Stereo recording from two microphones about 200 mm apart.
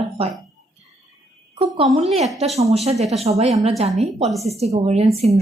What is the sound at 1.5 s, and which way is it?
Speech, 30° right (ahead or behind).